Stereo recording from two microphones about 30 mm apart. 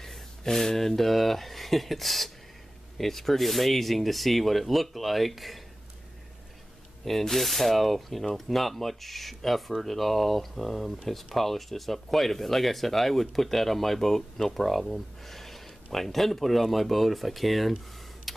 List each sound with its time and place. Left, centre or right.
0.0 s speech: centre
7.1 s speech: centre